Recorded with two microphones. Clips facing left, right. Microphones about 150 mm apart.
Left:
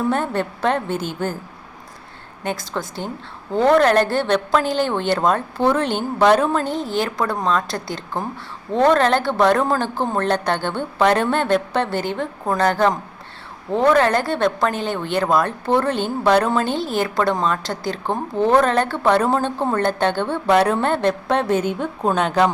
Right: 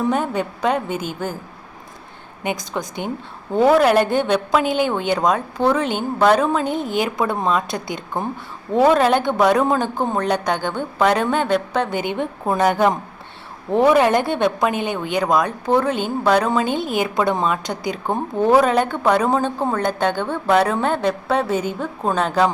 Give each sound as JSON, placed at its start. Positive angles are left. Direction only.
{"t": 0.1, "sound": "a woman's voice", "side_deg": -10}
{"t": 2.4, "sound": "a woman's voice", "side_deg": -15}
{"t": 6.8, "sound": "speech", "side_deg": -15}
{"t": 8.7, "sound": "a woman's voice", "side_deg": -10}
{"t": 17.7, "sound": "a woman's voice", "side_deg": -15}
{"t": 19.5, "sound": "a woman's voice", "side_deg": -5}